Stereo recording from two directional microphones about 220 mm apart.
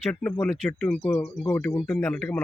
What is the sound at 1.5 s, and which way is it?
Speech, 10° left (ahead or behind).